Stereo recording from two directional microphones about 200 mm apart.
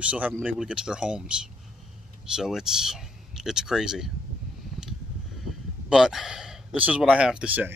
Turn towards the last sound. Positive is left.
turn(degrees=-5)  # may be behind; listen again after turning